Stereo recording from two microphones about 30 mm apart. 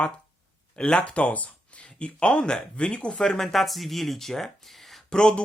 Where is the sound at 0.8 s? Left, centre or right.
Left.